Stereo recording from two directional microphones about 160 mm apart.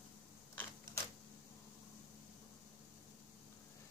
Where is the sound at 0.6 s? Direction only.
15° left (ahead or behind).